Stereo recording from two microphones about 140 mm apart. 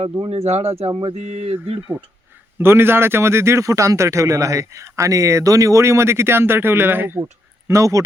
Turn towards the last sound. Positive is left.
turn(degrees=-20)  # may be behind; listen again after turning